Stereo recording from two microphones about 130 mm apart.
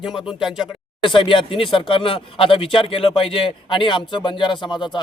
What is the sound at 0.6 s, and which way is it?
Speech, 35° left (ahead or behind).